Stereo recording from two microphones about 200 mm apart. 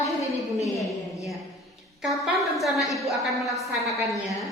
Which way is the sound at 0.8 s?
Centre (ahead or behind).